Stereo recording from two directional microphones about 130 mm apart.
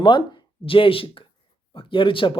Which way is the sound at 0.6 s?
45° left (ahead or behind).